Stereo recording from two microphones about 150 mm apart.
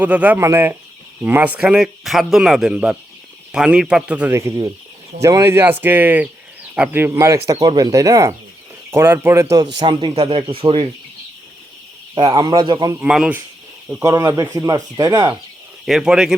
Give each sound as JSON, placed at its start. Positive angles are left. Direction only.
{"t": 0.0, "sound": "speech", "side_deg": -10}
{"t": 4.4, "sound": "speech", "side_deg": -20}
{"t": 12.1, "sound": "speech", "side_deg": -30}
{"t": 13.0, "sound": "speech", "side_deg": -5}
{"t": 14.0, "sound": "speech", "side_deg": -20}
{"t": 15.9, "sound": "speech", "side_deg": -5}